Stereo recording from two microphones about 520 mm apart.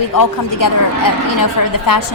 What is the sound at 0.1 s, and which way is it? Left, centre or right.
A woman's voice, left.